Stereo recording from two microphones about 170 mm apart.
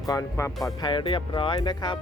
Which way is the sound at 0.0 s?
20° left (ahead or behind).